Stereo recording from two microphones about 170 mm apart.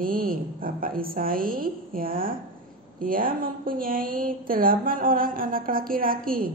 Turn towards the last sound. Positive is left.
turn(degrees=-55)  # may be behind; listen again after turning